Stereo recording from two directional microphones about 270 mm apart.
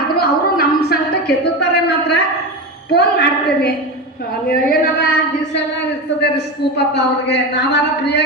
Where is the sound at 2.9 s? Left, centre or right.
Left.